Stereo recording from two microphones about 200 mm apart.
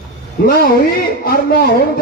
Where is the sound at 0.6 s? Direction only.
50° left (ahead or behind).